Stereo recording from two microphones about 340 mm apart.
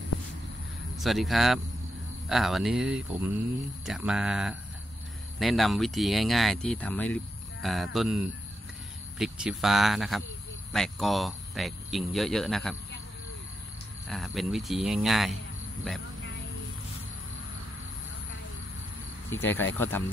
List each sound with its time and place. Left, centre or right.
0.9 s speech: centre
14.0 s speech: centre
19.3 s speech: centre